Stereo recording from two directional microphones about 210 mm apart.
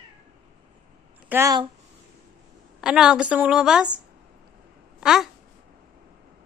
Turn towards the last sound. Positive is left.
turn(degrees=0)  # may be behind; listen again after turning